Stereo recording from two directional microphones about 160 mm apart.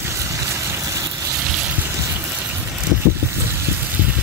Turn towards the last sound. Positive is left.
turn(degrees=-10)  # may be behind; listen again after turning